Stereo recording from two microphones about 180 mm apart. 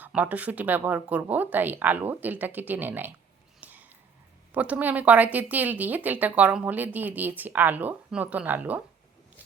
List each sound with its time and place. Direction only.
0.0 s speech: 10° right (ahead or behind)
3.6 s a sound: 10° right (ahead or behind)
4.5 s speech: 10° right (ahead or behind)